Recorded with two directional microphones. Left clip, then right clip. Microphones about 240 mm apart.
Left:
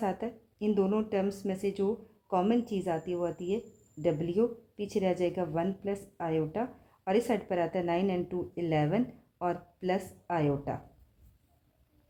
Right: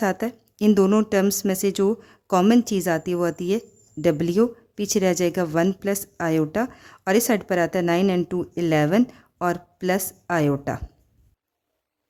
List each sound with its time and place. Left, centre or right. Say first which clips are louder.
0.0 s speech: right 9 dB; right